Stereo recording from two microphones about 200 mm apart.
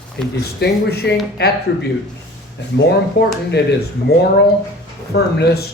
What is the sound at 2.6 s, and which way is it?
Speech, 60° left (ahead or behind).